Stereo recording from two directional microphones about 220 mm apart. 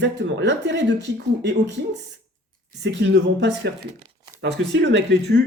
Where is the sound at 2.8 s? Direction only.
55° right (ahead or behind).